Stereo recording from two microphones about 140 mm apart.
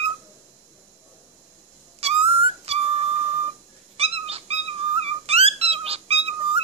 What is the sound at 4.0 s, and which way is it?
Cat, 45° right (ahead or behind).